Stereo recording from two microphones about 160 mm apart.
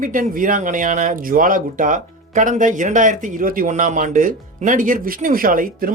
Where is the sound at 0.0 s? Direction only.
55° right (ahead or behind).